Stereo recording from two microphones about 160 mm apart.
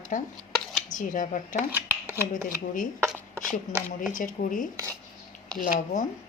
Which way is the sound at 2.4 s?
55° left (ahead or behind).